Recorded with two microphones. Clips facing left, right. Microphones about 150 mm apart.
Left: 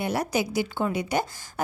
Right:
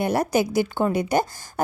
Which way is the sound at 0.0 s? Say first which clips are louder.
Right 5 dB; 50° right (ahead or behind).